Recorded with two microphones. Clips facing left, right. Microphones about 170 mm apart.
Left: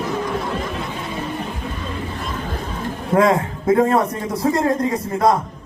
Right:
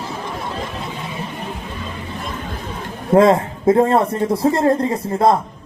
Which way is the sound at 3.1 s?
30° right (ahead or behind).